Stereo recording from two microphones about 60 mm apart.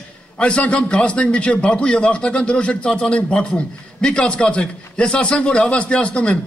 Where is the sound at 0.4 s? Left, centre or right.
Centre.